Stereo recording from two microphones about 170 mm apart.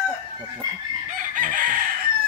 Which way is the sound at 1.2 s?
50° right (ahead or behind).